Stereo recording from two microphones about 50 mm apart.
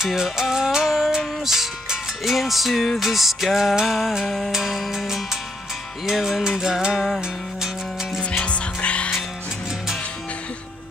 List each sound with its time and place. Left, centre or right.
0.0 s music: centre
8.2 s music: left